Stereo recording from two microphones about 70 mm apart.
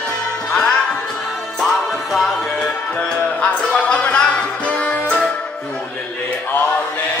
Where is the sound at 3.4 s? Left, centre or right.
Centre.